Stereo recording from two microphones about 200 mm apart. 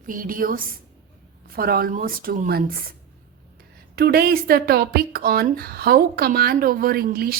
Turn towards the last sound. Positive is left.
turn(degrees=-50)  # may be behind; listen again after turning